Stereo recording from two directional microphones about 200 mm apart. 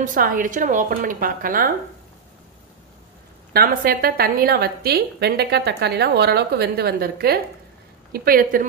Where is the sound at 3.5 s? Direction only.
50° right (ahead or behind).